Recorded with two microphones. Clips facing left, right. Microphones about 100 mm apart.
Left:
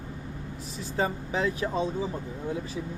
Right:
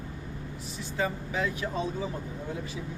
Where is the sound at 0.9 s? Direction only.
30° left (ahead or behind).